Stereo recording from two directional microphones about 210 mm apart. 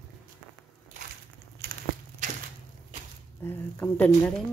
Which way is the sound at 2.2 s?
35° right (ahead or behind).